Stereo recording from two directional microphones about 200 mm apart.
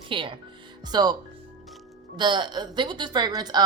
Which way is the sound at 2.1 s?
25° right (ahead or behind).